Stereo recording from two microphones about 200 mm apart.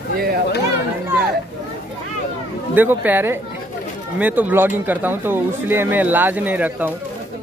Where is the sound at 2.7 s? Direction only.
10° right (ahead or behind).